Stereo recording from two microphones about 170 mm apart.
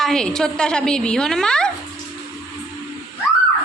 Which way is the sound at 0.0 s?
5° left (ahead or behind).